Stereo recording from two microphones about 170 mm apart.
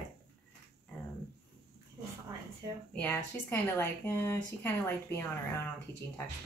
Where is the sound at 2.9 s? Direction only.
10° left (ahead or behind).